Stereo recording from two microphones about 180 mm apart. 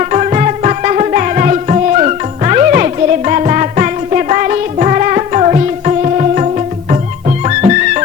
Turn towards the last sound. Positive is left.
turn(degrees=-40)  # may be behind; listen again after turning